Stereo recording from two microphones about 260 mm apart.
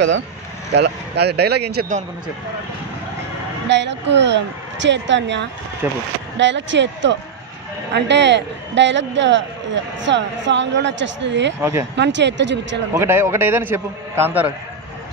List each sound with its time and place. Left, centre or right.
0.7 s speech: right
3.6 s a man's voice: right
12.9 s a man's voice: centre